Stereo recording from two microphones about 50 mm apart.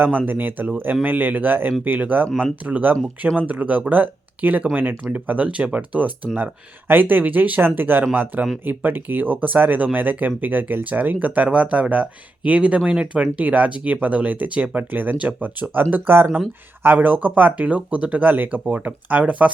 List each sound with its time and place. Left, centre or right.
0.3 s speech: right
2.9 s speech: right
3.4 s speech: right
6.3 s speech: right
11.4 s speech: right